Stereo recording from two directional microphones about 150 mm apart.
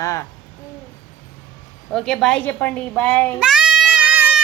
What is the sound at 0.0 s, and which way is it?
Speech, 20° left (ahead or behind).